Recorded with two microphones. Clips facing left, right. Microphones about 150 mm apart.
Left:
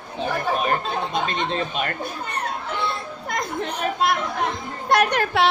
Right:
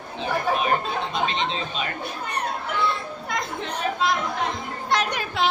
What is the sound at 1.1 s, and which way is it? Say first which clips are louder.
Speech: left 1 dB; 50° left (ahead or behind).